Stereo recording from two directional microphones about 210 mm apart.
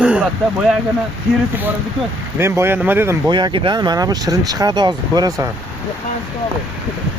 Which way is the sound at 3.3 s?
20° right (ahead or behind).